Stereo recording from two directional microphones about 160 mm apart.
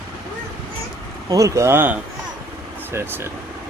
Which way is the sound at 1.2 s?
20° right (ahead or behind).